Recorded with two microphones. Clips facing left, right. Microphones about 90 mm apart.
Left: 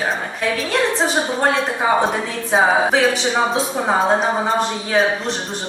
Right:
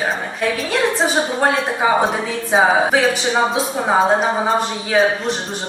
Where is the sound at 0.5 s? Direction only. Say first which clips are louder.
Left 1 dB; centre (ahead or behind).